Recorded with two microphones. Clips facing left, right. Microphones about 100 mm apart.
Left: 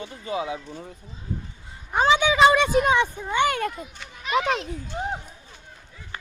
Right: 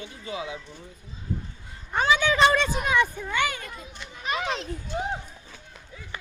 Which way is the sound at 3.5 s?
55° left (ahead or behind).